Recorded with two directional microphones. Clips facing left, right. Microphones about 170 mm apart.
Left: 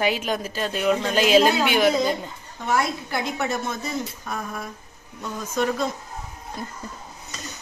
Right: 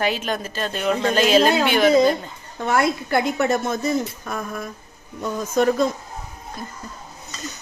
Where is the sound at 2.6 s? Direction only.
60° right (ahead or behind).